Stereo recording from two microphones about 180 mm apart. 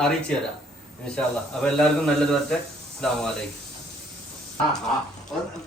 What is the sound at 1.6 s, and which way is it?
A man's voice, 5° left (ahead or behind).